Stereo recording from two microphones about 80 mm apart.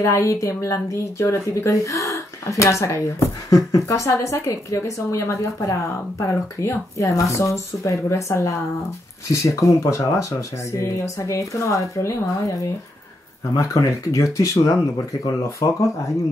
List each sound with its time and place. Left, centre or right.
0.0 s speech: left
13.6 s speech: left